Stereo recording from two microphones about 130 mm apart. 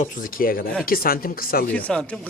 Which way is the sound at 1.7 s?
10° left (ahead or behind).